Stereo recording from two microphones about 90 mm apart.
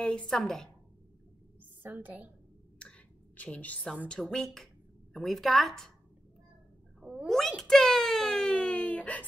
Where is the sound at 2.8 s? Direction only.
15° left (ahead or behind).